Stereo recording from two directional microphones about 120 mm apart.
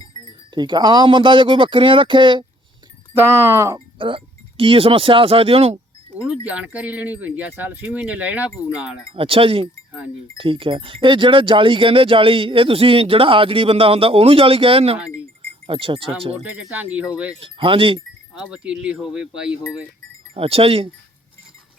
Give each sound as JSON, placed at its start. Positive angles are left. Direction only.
{"t": 0.5, "sound": "speech", "side_deg": -40}
{"t": 3.2, "sound": "speech", "side_deg": -25}
{"t": 3.8, "sound": "speech", "side_deg": -45}
{"t": 6.4, "sound": "speech", "side_deg": -10}
{"t": 9.1, "sound": "speech", "side_deg": -50}
{"t": 16.3, "sound": "speech", "side_deg": -15}
{"t": 17.4, "sound": "speech", "side_deg": -45}
{"t": 18.5, "sound": "speech", "side_deg": -10}
{"t": 20.3, "sound": "speech", "side_deg": -50}